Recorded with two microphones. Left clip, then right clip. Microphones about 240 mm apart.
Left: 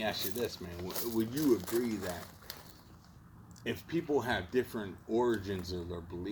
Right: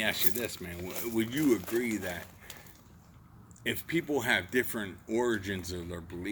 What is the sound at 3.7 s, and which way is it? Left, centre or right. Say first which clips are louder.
Speech: right 3 dB; right.